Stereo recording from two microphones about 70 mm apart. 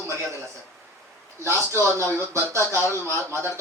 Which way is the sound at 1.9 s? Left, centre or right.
Right.